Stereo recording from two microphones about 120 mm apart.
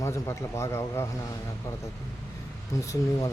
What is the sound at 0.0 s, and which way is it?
Speech, 25° left (ahead or behind).